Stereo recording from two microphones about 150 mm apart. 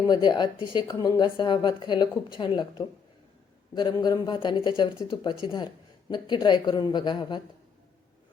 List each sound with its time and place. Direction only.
0.1 s a woman's voice: 30° left (ahead or behind)